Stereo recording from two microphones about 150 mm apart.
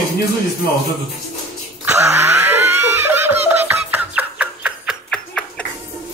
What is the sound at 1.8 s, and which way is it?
Laughter, 15° right (ahead or behind).